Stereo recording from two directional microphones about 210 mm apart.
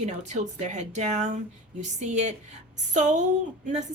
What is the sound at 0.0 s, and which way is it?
A woman's voice, 35° right (ahead or behind).